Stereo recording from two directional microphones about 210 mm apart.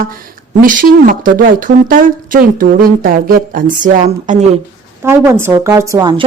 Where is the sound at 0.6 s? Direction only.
40° right (ahead or behind).